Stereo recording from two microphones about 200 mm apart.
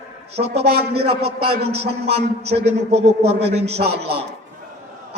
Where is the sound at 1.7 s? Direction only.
30° right (ahead or behind).